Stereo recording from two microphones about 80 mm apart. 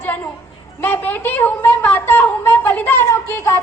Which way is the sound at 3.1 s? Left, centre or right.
Left.